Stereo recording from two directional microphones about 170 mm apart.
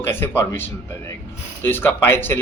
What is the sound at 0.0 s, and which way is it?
A man's voice, 15° left (ahead or behind).